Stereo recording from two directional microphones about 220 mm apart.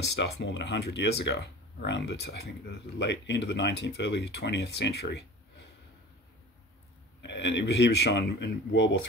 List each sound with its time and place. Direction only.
0.1 s speech: 55° left (ahead or behind)
7.2 s speech: 55° left (ahead or behind)